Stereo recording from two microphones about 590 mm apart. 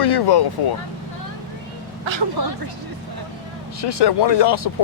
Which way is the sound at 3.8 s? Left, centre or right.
Left.